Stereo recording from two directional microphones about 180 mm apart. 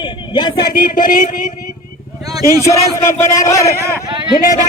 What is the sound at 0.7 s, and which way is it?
Speech, 50° left (ahead or behind).